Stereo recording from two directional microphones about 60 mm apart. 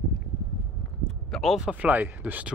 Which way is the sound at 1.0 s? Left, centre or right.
Centre.